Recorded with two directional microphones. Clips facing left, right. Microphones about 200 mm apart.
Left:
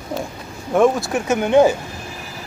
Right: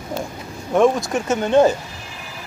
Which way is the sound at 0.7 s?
5° left (ahead or behind).